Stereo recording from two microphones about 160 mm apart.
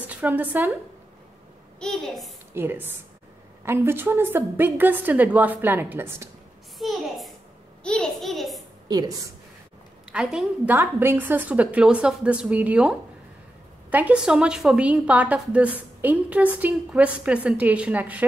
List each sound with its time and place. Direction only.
0.0 s speech: 10° right (ahead or behind)
1.8 s a child's voice: 5° left (ahead or behind)
2.5 s a woman's voice: 15° right (ahead or behind)
6.8 s a child's voice: centre (ahead or behind)
8.8 s a woman's voice: 25° right (ahead or behind)
10.1 s a woman's voice: 5° right (ahead or behind)